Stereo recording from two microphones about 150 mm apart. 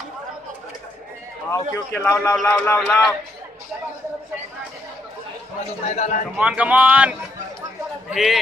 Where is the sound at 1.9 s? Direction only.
10° left (ahead or behind).